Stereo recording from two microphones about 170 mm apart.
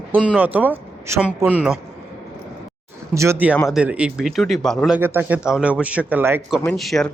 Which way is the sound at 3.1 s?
15° right (ahead or behind).